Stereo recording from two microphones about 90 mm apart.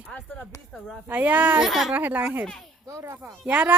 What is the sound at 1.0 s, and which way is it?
Speech, 20° right (ahead or behind).